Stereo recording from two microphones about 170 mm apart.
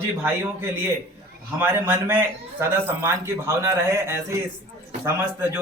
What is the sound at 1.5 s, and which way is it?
A man's voice, 15° right (ahead or behind).